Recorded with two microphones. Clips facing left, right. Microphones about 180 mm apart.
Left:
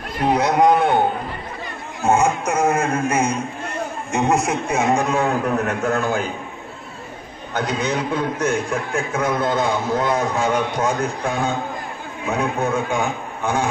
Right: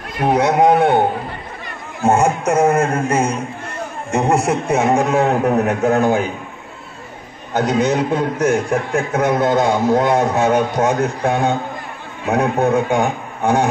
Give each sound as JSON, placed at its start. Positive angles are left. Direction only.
{"t": 0.2, "sound": "a man's voice", "side_deg": -50}
{"t": 2.0, "sound": "a man's voice", "side_deg": -65}
{"t": 4.4, "sound": "a man's voice", "side_deg": -60}
{"t": 7.5, "sound": "a man's voice", "side_deg": -45}
{"t": 8.9, "sound": "a man's voice", "side_deg": -65}
{"t": 9.4, "sound": "a man's voice", "side_deg": -45}
{"t": 10.1, "sound": "a man's voice", "side_deg": -70}